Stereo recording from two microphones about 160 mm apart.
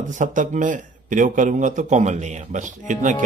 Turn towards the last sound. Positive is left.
turn(degrees=-50)  # may be behind; listen again after turning